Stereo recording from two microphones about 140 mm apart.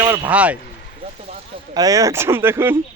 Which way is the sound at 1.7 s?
25° right (ahead or behind).